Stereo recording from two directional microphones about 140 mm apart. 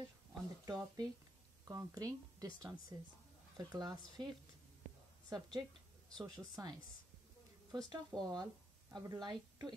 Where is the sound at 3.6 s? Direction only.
30° right (ahead or behind).